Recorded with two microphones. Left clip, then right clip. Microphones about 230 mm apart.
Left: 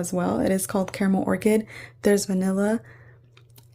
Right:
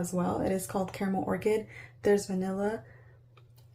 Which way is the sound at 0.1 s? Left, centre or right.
Left.